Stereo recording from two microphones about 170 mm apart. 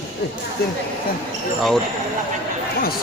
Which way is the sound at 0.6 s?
65° left (ahead or behind).